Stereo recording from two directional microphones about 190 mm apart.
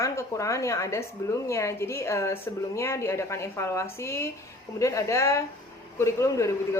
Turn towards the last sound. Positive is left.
turn(degrees=15)  # may be behind; listen again after turning